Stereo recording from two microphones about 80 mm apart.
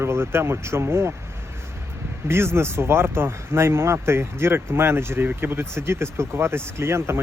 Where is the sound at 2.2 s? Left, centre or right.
Right.